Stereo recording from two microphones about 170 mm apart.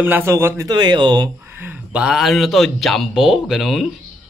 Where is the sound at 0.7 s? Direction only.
25° right (ahead or behind).